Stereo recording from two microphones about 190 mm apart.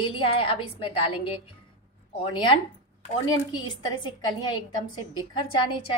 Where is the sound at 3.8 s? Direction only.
25° left (ahead or behind).